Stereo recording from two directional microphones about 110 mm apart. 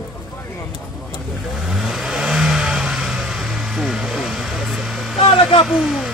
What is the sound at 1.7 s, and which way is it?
Vehicle, centre (ahead or behind).